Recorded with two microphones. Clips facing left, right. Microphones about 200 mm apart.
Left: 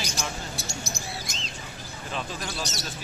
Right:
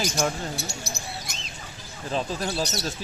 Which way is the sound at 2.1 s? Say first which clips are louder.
Right 6 dB; 35° right (ahead or behind).